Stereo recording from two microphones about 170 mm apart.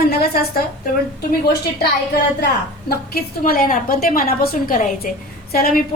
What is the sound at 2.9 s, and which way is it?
A woman's voice, 65° left (ahead or behind).